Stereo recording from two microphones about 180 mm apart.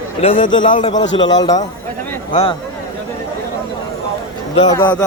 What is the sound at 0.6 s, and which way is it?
Speech, 45° left (ahead or behind).